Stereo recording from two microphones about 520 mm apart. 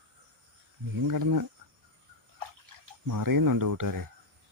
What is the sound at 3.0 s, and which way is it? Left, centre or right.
Speech, right.